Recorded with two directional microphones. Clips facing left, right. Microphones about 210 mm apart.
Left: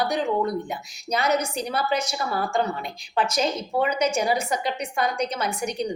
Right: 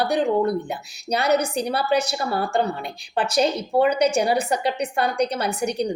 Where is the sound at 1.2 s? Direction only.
35° right (ahead or behind).